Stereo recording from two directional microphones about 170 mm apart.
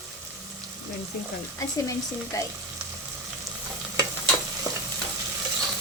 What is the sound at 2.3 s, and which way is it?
Speech, 20° left (ahead or behind).